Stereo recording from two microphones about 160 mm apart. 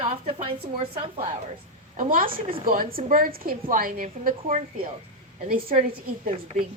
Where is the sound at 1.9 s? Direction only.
55° right (ahead or behind).